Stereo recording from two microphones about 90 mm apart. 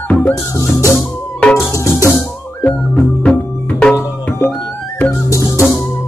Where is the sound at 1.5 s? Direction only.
30° left (ahead or behind).